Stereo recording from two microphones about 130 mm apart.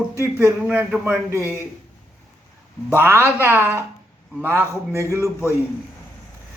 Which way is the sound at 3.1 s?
20° left (ahead or behind).